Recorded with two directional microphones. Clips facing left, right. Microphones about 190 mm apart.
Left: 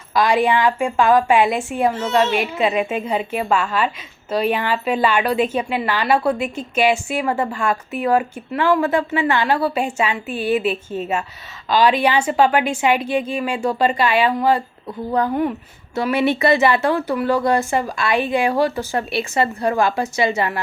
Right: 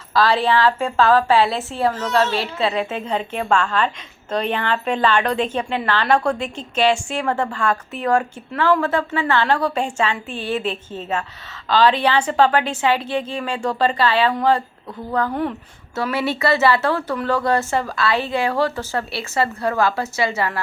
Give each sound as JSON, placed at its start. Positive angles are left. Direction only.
{"t": 0.1, "sound": "a woman's voice", "side_deg": 15}